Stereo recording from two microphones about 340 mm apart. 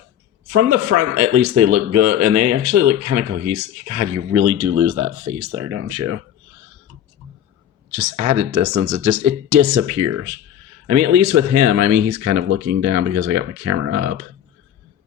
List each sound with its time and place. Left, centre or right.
0.4 s speech: right
8.2 s speech: right